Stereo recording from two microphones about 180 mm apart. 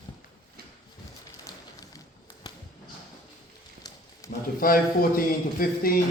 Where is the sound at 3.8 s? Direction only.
20° left (ahead or behind).